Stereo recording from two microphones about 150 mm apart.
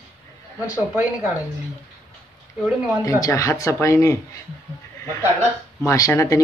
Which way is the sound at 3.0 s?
20° left (ahead or behind).